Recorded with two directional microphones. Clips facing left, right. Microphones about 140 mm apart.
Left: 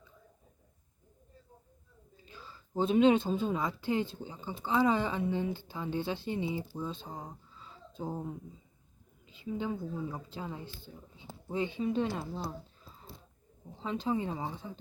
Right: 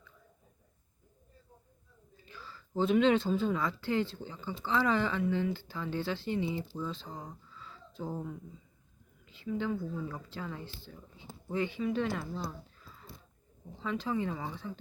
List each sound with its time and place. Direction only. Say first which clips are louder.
2.2 s speech: right 1 dB; 20° left (ahead or behind)